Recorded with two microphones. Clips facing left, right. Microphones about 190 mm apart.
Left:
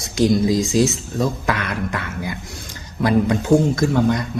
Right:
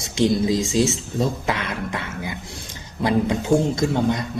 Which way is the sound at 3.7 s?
20° right (ahead or behind).